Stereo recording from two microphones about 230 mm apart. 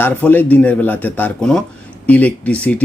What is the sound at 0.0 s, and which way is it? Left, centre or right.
Speech, centre.